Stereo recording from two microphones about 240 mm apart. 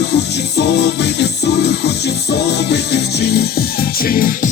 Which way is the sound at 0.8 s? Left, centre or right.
Left.